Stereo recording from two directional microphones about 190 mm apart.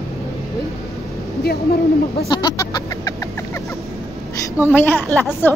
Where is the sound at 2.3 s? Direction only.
25° left (ahead or behind).